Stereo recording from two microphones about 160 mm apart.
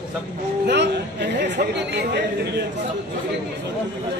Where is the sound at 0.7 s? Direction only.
90° right.